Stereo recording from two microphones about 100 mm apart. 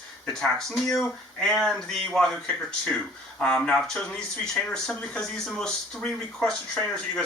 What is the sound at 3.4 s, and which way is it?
A man's voice, 5° left (ahead or behind).